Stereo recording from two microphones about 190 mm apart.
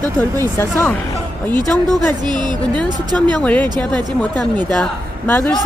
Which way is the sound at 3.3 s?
5° left (ahead or behind).